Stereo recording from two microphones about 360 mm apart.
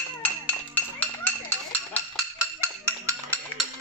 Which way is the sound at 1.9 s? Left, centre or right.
Centre.